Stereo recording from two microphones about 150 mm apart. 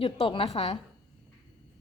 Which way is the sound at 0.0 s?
35° left (ahead or behind).